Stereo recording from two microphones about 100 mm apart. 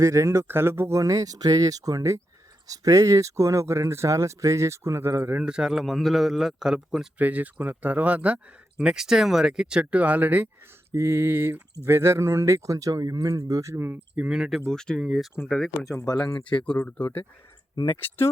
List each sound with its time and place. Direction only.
0.0 s speech: 30° right (ahead or behind)
5.5 s speech: 5° right (ahead or behind)
7.2 s speech: 15° right (ahead or behind)
14.2 s speech: 5° right (ahead or behind)
14.7 s speech: 5° left (ahead or behind)
15.8 s speech: 35° left (ahead or behind); by 16.6 s 55° left (ahead or behind)
16.7 s speech: 20° left (ahead or behind)